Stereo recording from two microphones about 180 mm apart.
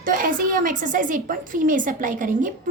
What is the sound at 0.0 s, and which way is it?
A woman's voice, 50° right (ahead or behind).